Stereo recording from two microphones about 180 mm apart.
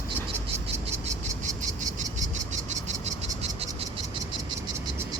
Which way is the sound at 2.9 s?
35° right (ahead or behind).